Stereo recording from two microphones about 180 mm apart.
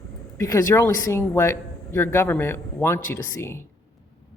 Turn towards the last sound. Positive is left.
turn(degrees=15)  # may be behind; listen again after turning